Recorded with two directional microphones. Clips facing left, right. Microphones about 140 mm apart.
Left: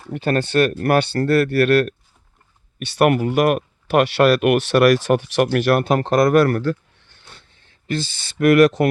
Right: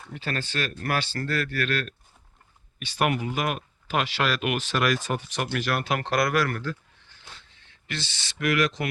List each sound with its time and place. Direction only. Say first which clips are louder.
0.1 s speech: left 13 dB; 55° left (ahead or behind)
5.9 s speech: left 8 dB; 40° left (ahead or behind); by 6.7 s 60° left (ahead or behind)
7.6 s speech: left 12 dB; 45° left (ahead or behind); by 8.9 s 60° left (ahead or behind)